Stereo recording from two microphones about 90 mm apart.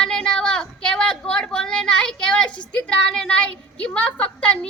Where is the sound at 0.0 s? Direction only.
5° left (ahead or behind).